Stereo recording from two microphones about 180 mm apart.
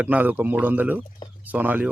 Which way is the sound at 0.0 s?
10° right (ahead or behind).